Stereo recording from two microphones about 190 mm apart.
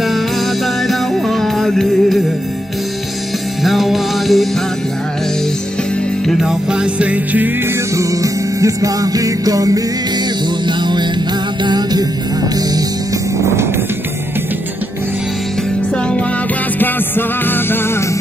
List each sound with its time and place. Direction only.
0.8 s music: centre (ahead or behind)
3.6 s music: centre (ahead or behind)
6.2 s music: centre (ahead or behind); by 9.8 s 20° right (ahead or behind)
10.8 s music: 25° right (ahead or behind)